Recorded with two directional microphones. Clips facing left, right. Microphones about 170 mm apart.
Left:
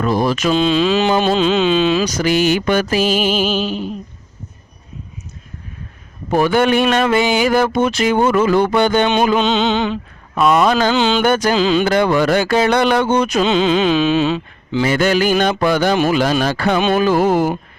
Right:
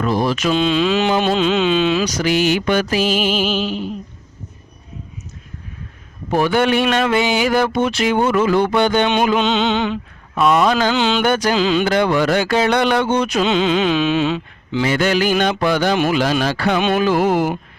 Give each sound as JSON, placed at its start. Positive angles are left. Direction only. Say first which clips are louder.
{"t": 0.0, "sound": "speech", "louder": "left 2 dB", "side_deg": 45}
{"t": 2.0, "sound": "carnatic music", "louder": "left 2 dB", "side_deg": 45}
{"t": 6.3, "sound": "carnatic music", "louder": "left 2 dB", "side_deg": 45}
{"t": 10.4, "sound": "carnatic music", "louder": "left 1 dB", "side_deg": 45}
{"t": 16.7, "sound": "speech", "louder": "left 2 dB", "side_deg": 35}